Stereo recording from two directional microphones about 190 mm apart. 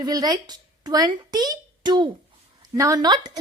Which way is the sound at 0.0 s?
20° right (ahead or behind).